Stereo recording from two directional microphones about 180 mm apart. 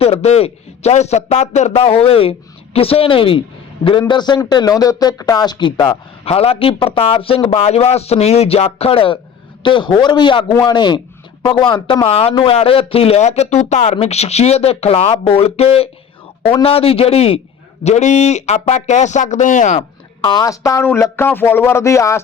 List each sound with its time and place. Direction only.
0.0 s a man's voice: 35° left (ahead or behind)
20.2 s speech: 20° left (ahead or behind)